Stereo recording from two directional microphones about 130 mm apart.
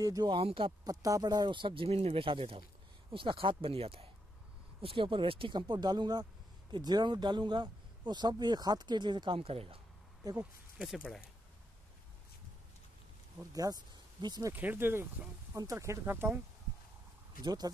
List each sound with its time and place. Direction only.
0.0 s speech: 30° right (ahead or behind)
0.8 s speech: 25° right (ahead or behind); by 9.8 s 45° right (ahead or behind)
10.8 s speech: centre (ahead or behind)
13.5 s speech: 30° right (ahead or behind)
14.5 s speech: 15° right (ahead or behind)
17.4 s speech: 30° right (ahead or behind)